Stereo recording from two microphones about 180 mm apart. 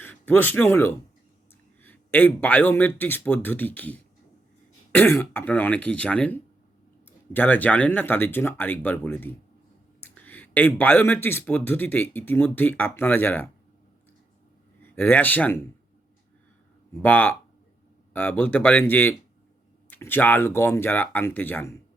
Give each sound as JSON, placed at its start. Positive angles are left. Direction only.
{"t": 0.0, "sound": "speech", "side_deg": 10}
{"t": 10.0, "sound": "a sound", "side_deg": 10}
{"t": 10.8, "sound": "speech", "side_deg": 10}
{"t": 14.8, "sound": "speech", "side_deg": 10}
{"t": 16.9, "sound": "speech", "side_deg": 10}